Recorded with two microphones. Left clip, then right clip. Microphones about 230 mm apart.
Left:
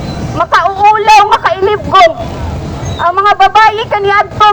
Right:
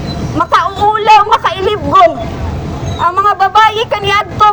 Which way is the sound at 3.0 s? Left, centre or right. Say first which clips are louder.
Left 1 dB; left.